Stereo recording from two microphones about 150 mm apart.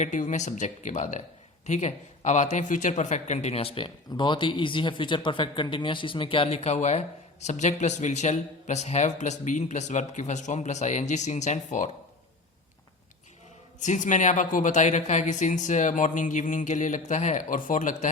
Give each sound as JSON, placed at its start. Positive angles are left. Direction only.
{"t": 0.0, "sound": "speech", "side_deg": 55}
{"t": 13.7, "sound": "speech", "side_deg": 55}